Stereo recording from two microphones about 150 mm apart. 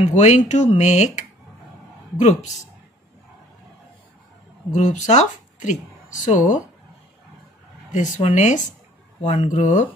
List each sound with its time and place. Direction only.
0.0 s speech: 50° left (ahead or behind)
4.7 s speech: 55° left (ahead or behind)
7.9 s speech: 50° left (ahead or behind)